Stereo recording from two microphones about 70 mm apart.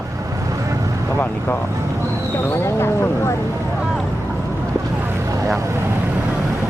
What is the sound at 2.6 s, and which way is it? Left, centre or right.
Speech, left.